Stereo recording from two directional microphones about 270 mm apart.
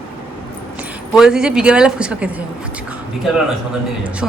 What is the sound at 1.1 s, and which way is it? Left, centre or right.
A woman's voice, centre.